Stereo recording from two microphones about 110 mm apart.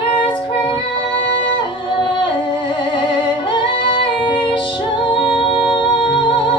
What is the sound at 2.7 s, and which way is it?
Music, 50° left (ahead or behind).